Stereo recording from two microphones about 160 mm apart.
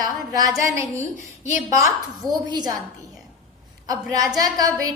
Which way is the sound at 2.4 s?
25° right (ahead or behind).